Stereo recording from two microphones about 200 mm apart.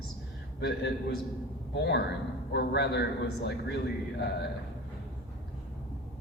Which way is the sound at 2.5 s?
55° left (ahead or behind).